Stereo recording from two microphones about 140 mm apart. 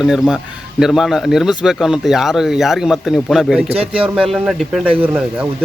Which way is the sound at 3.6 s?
45° right (ahead or behind).